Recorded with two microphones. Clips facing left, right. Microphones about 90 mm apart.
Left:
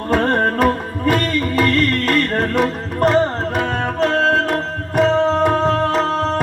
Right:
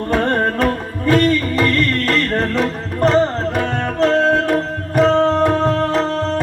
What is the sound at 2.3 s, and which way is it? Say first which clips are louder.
Music: left 1 dB; 10° left (ahead or behind).